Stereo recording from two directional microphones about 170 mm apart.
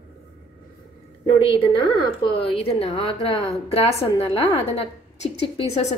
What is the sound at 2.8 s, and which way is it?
Speech, 30° left (ahead or behind).